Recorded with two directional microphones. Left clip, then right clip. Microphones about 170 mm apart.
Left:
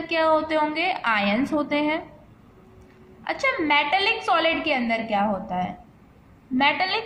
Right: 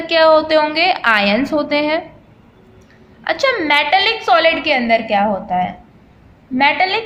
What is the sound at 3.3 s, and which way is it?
A woman's voice, 20° right (ahead or behind).